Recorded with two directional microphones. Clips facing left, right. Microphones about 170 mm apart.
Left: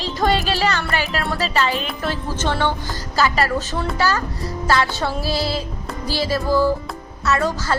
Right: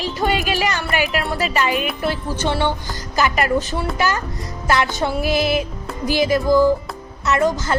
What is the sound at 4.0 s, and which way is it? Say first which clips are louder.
Music: left 3 dB; 20° right (ahead or behind).